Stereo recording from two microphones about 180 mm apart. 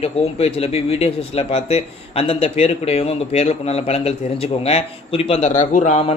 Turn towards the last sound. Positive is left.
turn(degrees=40)  # may be behind; listen again after turning